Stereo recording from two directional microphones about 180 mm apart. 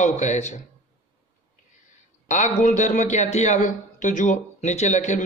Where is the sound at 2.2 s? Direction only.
40° left (ahead or behind).